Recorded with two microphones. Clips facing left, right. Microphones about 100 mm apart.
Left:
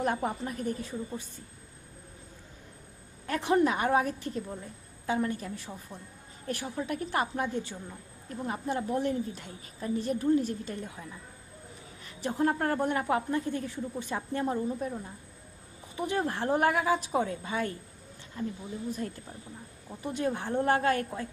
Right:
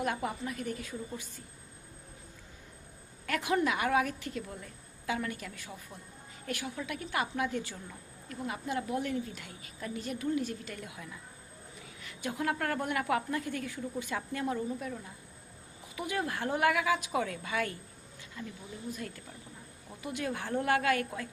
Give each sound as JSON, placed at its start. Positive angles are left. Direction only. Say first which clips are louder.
{"t": 0.0, "sound": "a woman's voice", "louder": "left 3 dB", "side_deg": 35}
{"t": 3.2, "sound": "a woman's voice", "louder": "left 4 dB", "side_deg": 30}
{"t": 7.5, "sound": "speech", "louder": "left 2 dB", "side_deg": 20}
{"t": 8.3, "sound": "a woman's voice", "louder": "left 3 dB", "side_deg": 35}
{"t": 12.2, "sound": "a woman's voice", "louder": "left 5 dB", "side_deg": 30}
{"t": 16.0, "sound": "a woman's voice", "louder": "left 4 dB", "side_deg": 30}